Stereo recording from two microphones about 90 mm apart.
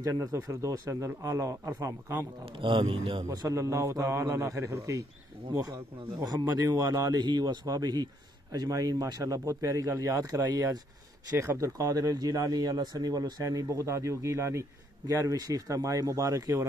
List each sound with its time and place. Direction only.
0.0 s speech: 40° right (ahead or behind)
2.6 s a man's voice: 70° right (ahead or behind)
3.3 s speech: 35° right (ahead or behind)
6.2 s speech: 45° right (ahead or behind)
11.8 s speech: 45° right (ahead or behind)